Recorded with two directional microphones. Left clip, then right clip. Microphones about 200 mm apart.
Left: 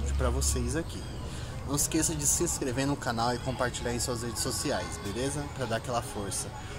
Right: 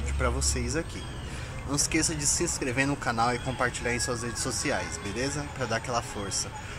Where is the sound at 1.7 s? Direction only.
35° right (ahead or behind).